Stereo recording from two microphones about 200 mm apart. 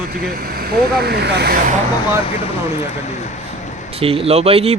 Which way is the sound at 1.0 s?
55° right (ahead or behind).